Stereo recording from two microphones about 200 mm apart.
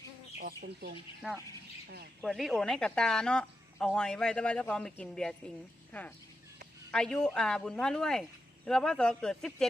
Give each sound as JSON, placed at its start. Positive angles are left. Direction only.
{"t": 0.3, "sound": "speech", "side_deg": -55}
{"t": 1.2, "sound": "speech", "side_deg": -5}